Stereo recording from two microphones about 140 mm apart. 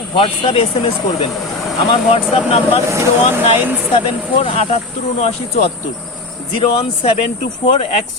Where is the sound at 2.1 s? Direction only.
45° left (ahead or behind).